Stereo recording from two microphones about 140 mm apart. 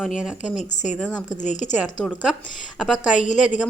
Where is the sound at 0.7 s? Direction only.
60° left (ahead or behind).